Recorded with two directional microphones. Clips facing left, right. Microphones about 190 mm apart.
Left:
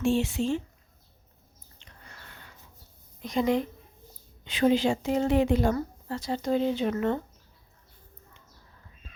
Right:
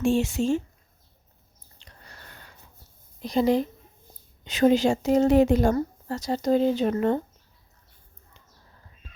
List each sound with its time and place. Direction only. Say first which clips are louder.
0.0 s a woman's voice: right 3 dB; 45° right (ahead or behind)
1.8 s a sound: right 1 dB; 40° right (ahead or behind)
3.2 s a woman's voice: right 4 dB; 35° right (ahead or behind)